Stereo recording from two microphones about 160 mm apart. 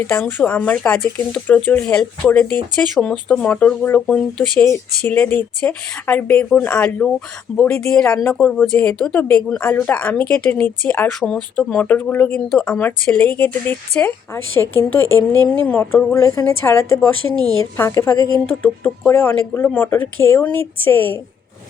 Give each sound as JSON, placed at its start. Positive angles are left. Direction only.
{"t": 0.0, "sound": "speech", "side_deg": 10}
{"t": 4.6, "sound": "speech", "side_deg": 15}